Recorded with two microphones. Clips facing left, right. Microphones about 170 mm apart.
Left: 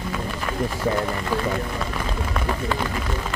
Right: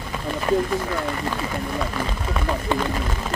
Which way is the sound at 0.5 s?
35° right (ahead or behind).